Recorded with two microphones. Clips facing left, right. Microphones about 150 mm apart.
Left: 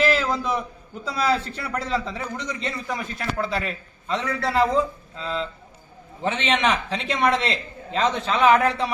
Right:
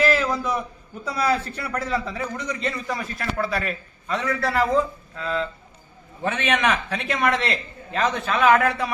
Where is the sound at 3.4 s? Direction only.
20° left (ahead or behind).